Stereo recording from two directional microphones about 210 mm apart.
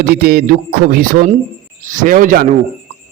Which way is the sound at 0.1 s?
45° right (ahead or behind).